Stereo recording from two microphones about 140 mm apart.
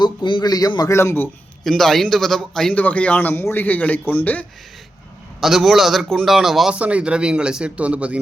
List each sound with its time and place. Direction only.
0.0 s a man's voice: 35° left (ahead or behind); by 1.3 s 15° left (ahead or behind)
1.6 s a man's voice: 5° left (ahead or behind)
5.4 s a man's voice: centre (ahead or behind)